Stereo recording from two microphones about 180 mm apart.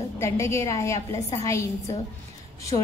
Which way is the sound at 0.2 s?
15° left (ahead or behind).